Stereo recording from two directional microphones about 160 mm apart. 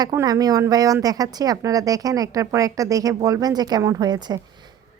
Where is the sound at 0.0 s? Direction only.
20° right (ahead or behind).